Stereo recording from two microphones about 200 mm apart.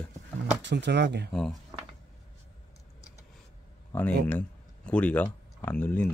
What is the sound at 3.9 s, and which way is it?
Speech, 10° left (ahead or behind).